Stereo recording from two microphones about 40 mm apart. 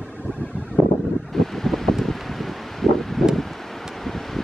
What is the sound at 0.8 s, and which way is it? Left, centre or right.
Wind noise, centre.